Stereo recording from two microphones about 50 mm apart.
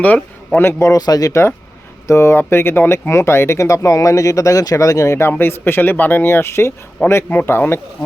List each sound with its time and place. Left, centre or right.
0.0 s a man's voice: left
0.8 s speech: left
2.4 s speech: left
3.1 s speech: left
5.3 s speech: left
6.2 s speech: left
7.0 s a man's voice: left
7.4 s speech: left